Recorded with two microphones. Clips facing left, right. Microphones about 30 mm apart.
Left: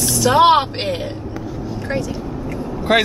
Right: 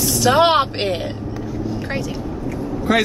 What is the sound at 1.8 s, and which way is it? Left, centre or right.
Vehicle, centre.